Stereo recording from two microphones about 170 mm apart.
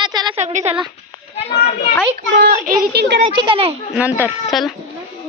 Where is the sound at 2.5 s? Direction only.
55° right (ahead or behind); by 3.1 s 75° right (ahead or behind).